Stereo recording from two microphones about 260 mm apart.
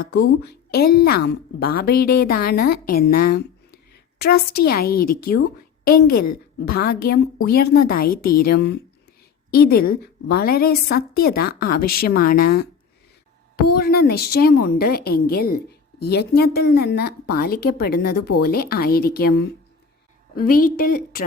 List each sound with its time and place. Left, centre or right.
0.0 s a woman's voice: left
6.1 s a woman's voice: left
6.7 s a woman's voice: left
10.2 s a woman's voice: left
13.7 s a woman's voice: left